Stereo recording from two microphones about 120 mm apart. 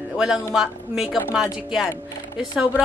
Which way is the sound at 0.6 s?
5° right (ahead or behind).